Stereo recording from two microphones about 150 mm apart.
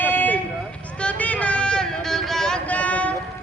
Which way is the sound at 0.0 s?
15° left (ahead or behind).